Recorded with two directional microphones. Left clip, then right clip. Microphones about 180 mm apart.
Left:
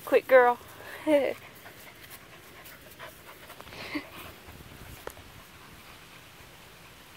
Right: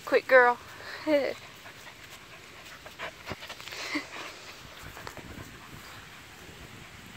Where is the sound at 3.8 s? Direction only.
5° left (ahead or behind).